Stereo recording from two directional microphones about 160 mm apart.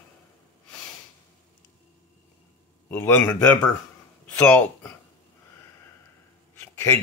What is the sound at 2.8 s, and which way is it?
A man's voice, 10° left (ahead or behind).